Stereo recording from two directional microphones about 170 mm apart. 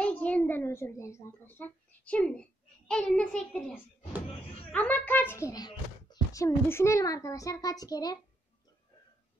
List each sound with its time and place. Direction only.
0.0 s a child's voice: 10° left (ahead or behind)